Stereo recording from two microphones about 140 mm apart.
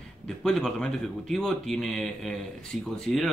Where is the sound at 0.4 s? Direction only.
5° left (ahead or behind).